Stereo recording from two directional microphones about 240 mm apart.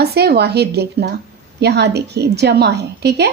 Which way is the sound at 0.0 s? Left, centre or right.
Right.